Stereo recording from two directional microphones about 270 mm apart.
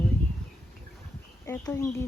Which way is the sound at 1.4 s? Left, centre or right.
Centre.